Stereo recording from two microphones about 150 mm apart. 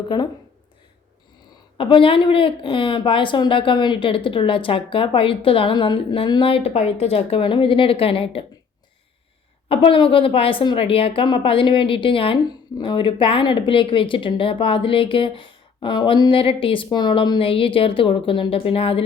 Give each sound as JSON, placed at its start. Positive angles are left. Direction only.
{"t": 0.1, "sound": "a woman's voice", "side_deg": 30}
{"t": 1.8, "sound": "a woman's voice", "side_deg": 35}
{"t": 9.6, "sound": "a woman's voice", "side_deg": 35}